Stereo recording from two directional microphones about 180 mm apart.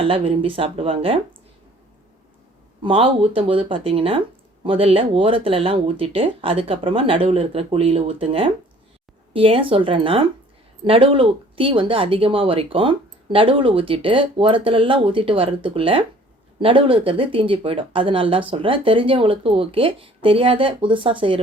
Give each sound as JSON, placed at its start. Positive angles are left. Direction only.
{"t": 0.0, "sound": "speech", "side_deg": -30}
{"t": 2.8, "sound": "speech", "side_deg": -30}